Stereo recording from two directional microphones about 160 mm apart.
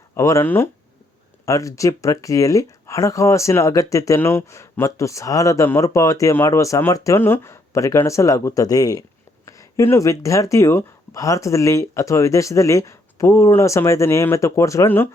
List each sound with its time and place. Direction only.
0.2 s speech: 20° left (ahead or behind)